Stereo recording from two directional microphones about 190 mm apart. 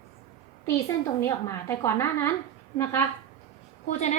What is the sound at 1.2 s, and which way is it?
A woman's voice, 15° left (ahead or behind).